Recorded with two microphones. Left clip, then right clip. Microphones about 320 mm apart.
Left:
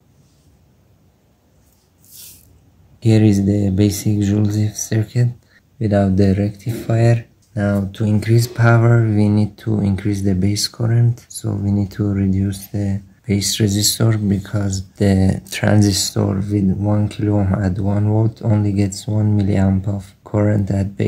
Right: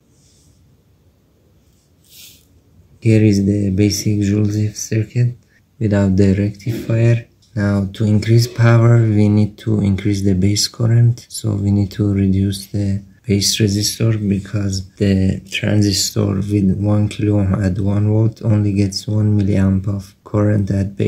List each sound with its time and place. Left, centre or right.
3.2 s speech: centre
3.9 s speech: left
4.2 s speech: centre
4.5 s speech: left
5.8 s speech: centre
7.5 s speech: centre
13.7 s speech: centre